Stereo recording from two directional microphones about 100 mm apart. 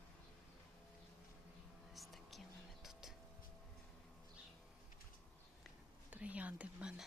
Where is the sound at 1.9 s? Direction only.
Centre (ahead or behind).